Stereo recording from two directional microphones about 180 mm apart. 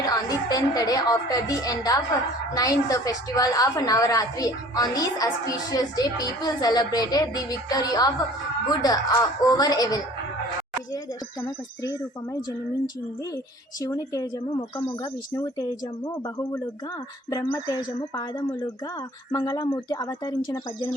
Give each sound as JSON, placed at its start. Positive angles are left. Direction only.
{"t": 0.0, "sound": "a woman's voice", "side_deg": 20}
{"t": 11.4, "sound": "a woman's voice", "side_deg": 20}